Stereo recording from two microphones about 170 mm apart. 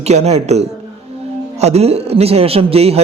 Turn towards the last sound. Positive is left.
turn(degrees=-35)  # may be behind; listen again after turning